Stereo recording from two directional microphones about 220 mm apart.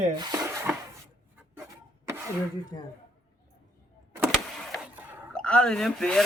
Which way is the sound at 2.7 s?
15° left (ahead or behind).